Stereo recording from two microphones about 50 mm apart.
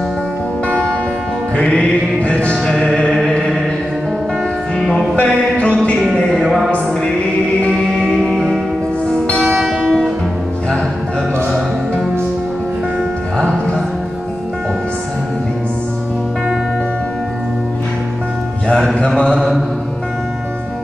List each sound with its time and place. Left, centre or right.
1.6 s music: left
2.9 s chant: centre
5.1 s music: left
6.1 s music: centre
6.4 s music: centre
8.0 s music: centre
19.1 s mantra: centre